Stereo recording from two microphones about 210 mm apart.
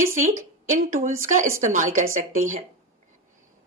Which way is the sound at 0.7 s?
40° right (ahead or behind).